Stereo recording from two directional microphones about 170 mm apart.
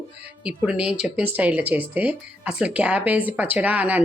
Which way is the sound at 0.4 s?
5° right (ahead or behind).